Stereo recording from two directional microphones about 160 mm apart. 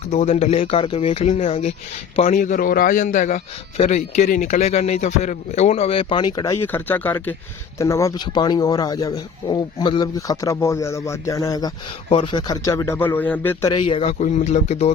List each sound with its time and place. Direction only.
0.1 s speech: 45° left (ahead or behind)
2.3 s a man's voice: 55° left (ahead or behind); by 13.7 s 15° left (ahead or behind)
13.7 s speech: 35° left (ahead or behind)